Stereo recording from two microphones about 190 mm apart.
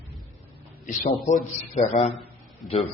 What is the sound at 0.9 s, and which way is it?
A man's voice, 45° left (ahead or behind).